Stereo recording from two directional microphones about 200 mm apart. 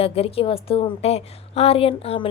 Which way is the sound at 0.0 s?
30° left (ahead or behind).